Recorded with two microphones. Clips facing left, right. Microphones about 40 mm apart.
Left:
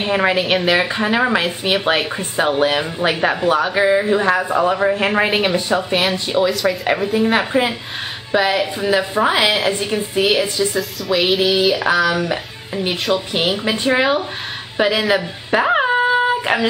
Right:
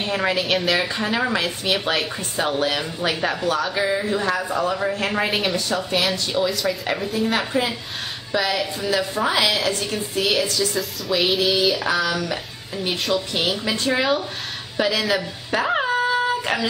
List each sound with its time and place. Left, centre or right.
0.0 s a woman's voice: left
6.5 s a woman's voice: centre
6.9 s a woman's voice: left
10.8 s a woman's voice: centre
11.3 s mantra: centre
12.1 s a woman's voice: left
14.8 s a sound: left